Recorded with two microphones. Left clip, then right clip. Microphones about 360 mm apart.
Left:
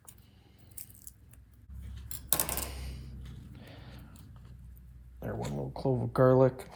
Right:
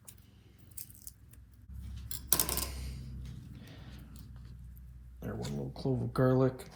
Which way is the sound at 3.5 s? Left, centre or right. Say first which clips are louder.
Left 2 dB; left.